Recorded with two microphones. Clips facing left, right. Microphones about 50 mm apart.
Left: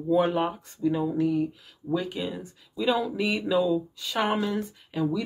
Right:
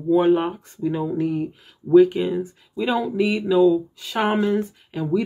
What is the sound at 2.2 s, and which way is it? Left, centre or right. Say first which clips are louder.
Speech: right 9 dB; centre.